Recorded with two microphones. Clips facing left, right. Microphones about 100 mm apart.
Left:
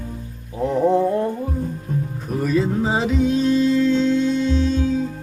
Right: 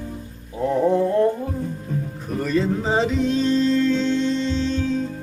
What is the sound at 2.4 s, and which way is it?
Music, 5° left (ahead or behind).